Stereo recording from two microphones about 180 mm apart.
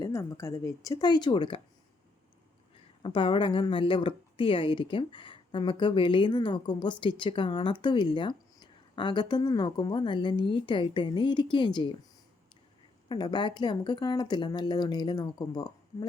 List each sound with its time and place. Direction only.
0.0 s speech: 15° left (ahead or behind)
3.0 s speech: 30° left (ahead or behind)
13.1 s speech: 25° left (ahead or behind)